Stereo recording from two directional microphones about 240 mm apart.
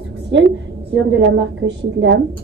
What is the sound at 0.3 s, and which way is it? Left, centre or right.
A woman's voice, right.